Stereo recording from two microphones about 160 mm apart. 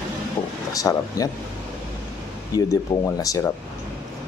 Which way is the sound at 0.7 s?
20° left (ahead or behind).